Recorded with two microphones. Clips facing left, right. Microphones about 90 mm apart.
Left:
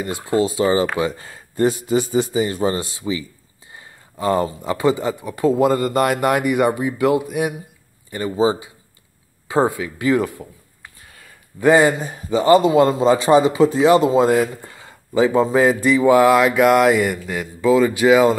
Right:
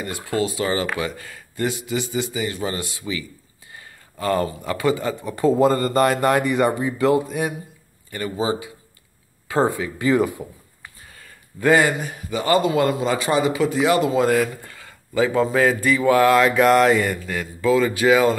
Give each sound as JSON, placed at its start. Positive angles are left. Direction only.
{"t": 0.0, "sound": "a man's voice", "side_deg": 25}
{"t": 5.2, "sound": "a man's voice", "side_deg": 5}
{"t": 9.7, "sound": "speech", "side_deg": 5}
{"t": 11.6, "sound": "a man's voice", "side_deg": 20}
{"t": 12.0, "sound": "a man's voice", "side_deg": 30}